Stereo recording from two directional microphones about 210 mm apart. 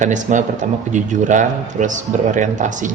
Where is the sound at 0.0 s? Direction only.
35° right (ahead or behind).